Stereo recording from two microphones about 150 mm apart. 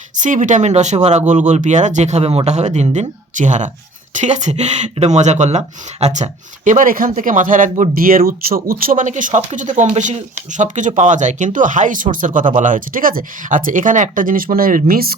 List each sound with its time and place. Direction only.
0.2 s speech: 55° right (ahead or behind); by 15.1 s 80° right